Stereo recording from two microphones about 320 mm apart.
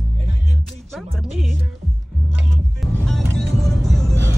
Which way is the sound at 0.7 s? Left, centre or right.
Centre.